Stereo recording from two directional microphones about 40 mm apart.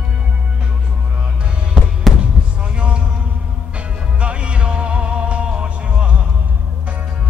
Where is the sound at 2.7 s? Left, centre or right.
Right.